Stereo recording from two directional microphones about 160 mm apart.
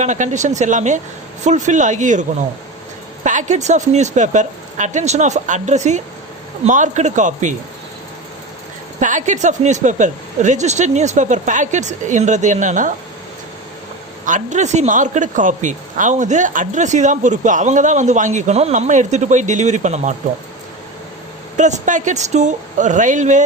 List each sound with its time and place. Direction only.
0.0 s speech: 50° right (ahead or behind)
3.2 s speech: 50° right (ahead or behind)
9.0 s speech: 50° right (ahead or behind)
14.3 s speech: 50° right (ahead or behind)
21.5 s speech: 50° right (ahead or behind)